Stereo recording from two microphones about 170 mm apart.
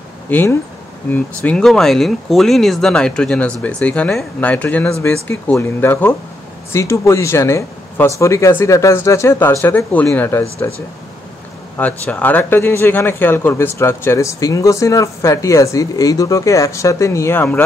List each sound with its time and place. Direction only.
0.3 s a man's voice: 10° left (ahead or behind)